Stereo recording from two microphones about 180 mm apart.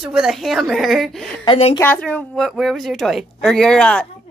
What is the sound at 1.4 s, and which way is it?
Speech, 30° left (ahead or behind).